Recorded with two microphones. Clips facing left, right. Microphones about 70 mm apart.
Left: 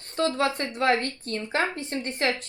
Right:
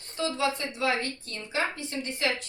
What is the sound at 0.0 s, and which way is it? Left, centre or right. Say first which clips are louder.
A woman's voice: left 4 dB; left.